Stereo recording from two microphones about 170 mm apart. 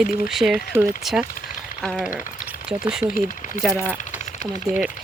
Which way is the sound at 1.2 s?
55° left (ahead or behind).